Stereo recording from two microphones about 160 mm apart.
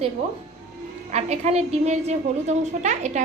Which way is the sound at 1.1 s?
45° right (ahead or behind).